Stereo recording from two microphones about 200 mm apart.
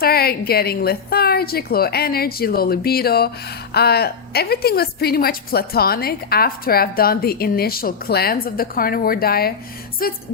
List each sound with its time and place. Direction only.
0.0 s a woman's voice: 50° left (ahead or behind)